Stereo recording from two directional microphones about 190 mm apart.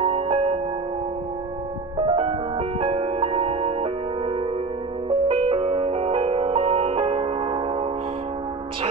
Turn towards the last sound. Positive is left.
turn(degrees=-35)  # may be behind; listen again after turning